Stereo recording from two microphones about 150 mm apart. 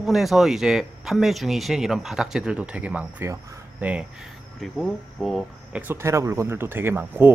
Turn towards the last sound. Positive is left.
turn(degrees=-15)  # may be behind; listen again after turning